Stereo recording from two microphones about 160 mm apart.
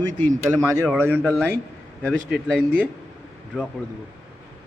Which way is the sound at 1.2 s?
5° left (ahead or behind).